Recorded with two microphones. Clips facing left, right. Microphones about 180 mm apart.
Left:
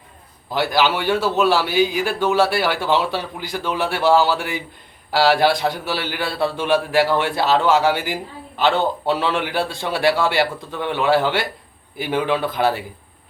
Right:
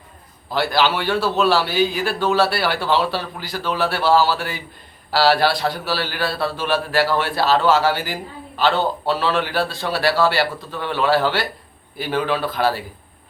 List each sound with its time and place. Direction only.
0.5 s a man's voice: 15° left (ahead or behind)